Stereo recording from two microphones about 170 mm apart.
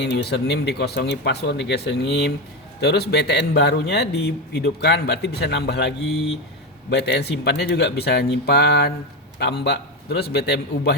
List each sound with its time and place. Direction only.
0.0 s a man's voice: 80° left